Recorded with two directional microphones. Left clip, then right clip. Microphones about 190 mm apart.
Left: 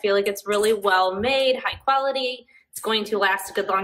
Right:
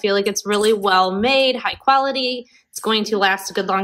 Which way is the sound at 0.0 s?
30° right (ahead or behind).